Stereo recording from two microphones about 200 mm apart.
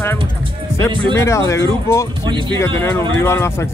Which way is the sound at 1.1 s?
15° left (ahead or behind).